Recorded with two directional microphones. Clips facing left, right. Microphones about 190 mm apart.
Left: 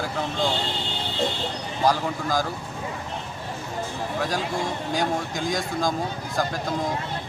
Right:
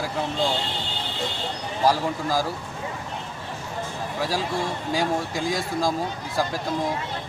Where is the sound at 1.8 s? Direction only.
5° right (ahead or behind).